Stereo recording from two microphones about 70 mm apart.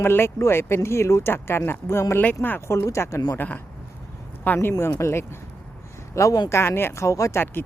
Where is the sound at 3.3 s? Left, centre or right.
Left.